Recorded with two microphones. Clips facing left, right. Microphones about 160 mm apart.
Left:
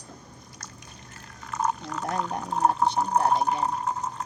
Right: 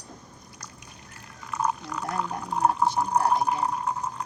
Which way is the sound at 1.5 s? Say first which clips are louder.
Even; 40° left (ahead or behind).